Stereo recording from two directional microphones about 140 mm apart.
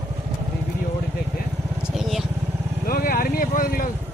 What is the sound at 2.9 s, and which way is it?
Vehicle, 90° left.